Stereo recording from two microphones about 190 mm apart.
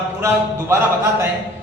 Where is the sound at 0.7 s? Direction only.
15° right (ahead or behind).